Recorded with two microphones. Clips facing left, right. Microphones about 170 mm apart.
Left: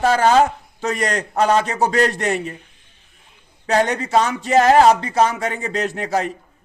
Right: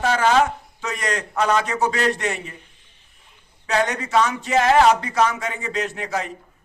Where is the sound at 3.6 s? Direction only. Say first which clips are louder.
Left 4 dB; 35° left (ahead or behind).